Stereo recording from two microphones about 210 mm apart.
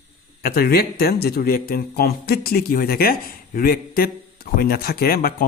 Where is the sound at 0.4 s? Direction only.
45° left (ahead or behind).